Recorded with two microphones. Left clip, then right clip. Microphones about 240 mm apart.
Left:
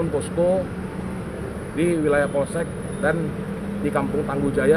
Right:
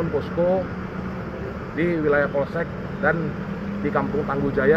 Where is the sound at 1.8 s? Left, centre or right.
Centre.